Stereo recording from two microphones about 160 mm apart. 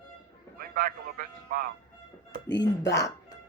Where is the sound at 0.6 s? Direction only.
65° right (ahead or behind).